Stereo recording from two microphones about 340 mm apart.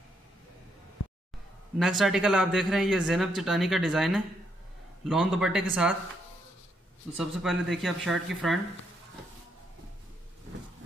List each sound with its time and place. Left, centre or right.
1.0 s music: left
1.8 s speech: centre
7.2 s speech: centre